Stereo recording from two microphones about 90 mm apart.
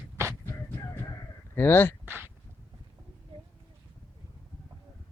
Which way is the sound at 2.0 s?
20° right (ahead or behind).